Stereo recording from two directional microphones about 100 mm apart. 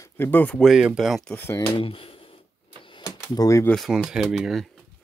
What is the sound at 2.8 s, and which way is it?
Typewriter, 55° left (ahead or behind).